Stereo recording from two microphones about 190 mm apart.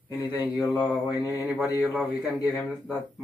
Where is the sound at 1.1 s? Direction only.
20° left (ahead or behind).